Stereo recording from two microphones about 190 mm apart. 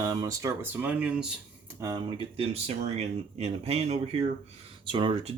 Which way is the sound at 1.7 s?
20° right (ahead or behind).